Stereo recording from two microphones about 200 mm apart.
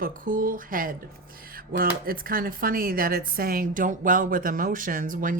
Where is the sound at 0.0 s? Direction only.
45° right (ahead or behind).